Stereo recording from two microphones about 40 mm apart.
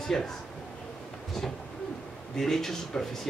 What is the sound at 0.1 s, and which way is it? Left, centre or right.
Speech, centre.